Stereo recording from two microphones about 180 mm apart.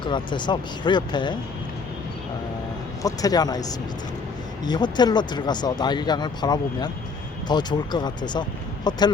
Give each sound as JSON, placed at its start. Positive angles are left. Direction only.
{"t": 0.0, "sound": "speech", "side_deg": 25}
{"t": 3.0, "sound": "speech", "side_deg": 20}